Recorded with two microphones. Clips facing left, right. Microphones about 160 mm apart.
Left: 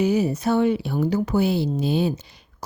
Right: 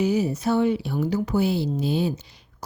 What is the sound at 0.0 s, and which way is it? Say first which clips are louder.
Speech: left 2 dB; 60° left (ahead or behind).